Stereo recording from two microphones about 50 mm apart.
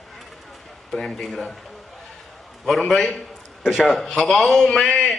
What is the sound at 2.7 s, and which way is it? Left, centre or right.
A man's voice, centre.